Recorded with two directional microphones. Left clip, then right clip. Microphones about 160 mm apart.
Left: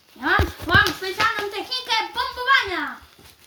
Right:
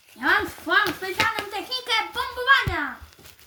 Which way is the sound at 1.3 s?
65° right (ahead or behind).